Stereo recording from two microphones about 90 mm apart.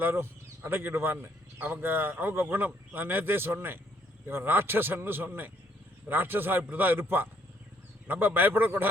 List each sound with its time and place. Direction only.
0.0 s a man's voice: 25° right (ahead or behind)